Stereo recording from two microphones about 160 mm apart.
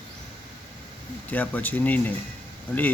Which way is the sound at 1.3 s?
10° left (ahead or behind).